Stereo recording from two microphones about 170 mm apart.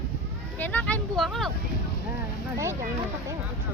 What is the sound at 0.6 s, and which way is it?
Vehicle, 10° left (ahead or behind).